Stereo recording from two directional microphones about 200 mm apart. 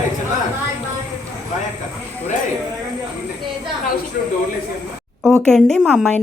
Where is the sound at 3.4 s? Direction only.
25° right (ahead or behind).